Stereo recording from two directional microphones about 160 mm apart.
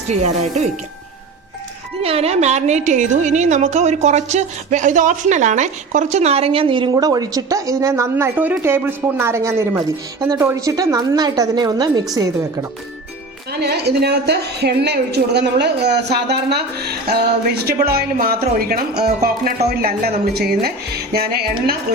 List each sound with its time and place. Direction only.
0.1 s speech: 45° right (ahead or behind)
2.0 s a woman's voice: 40° right (ahead or behind)
13.5 s a woman's voice: 90° right
17.8 s speech: 70° right (ahead or behind)